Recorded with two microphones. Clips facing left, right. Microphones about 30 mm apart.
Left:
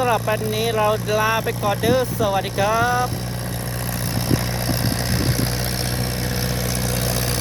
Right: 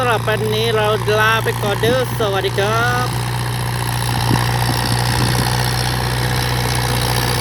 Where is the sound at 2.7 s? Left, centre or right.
Right.